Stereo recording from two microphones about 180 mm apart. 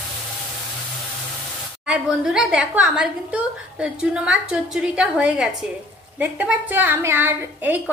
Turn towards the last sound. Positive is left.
turn(degrees=-10)  # may be behind; listen again after turning